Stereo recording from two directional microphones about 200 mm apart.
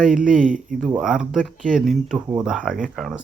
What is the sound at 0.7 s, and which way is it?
Speech, 45° right (ahead or behind).